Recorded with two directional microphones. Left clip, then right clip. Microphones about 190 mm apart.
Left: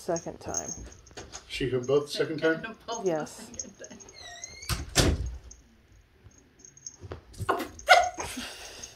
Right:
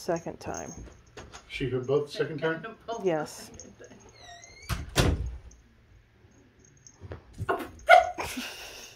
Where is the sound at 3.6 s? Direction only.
30° right (ahead or behind).